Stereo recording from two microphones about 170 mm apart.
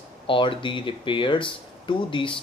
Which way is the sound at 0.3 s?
30° left (ahead or behind).